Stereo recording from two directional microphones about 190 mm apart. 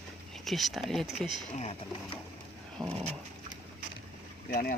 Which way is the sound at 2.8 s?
Centre (ahead or behind).